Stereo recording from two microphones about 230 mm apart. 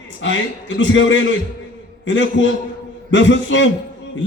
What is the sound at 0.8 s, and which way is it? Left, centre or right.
A man's voice, left.